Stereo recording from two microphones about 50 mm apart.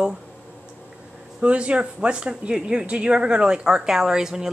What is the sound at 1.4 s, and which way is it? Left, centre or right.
Speech, right.